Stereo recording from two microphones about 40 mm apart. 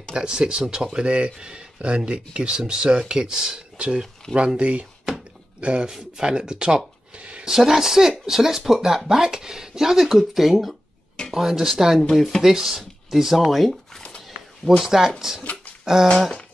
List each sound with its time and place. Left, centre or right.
0.1 s speech: right
3.5 s speech: right
4.2 s speech: centre
4.6 s speech: right
5.9 s speech: centre
7.2 s a sound: right
7.4 s speech: centre
14.8 s speech: centre
15.8 s dog: centre